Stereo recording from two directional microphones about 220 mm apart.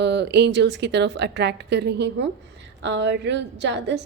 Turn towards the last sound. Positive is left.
turn(degrees=-55)  # may be behind; listen again after turning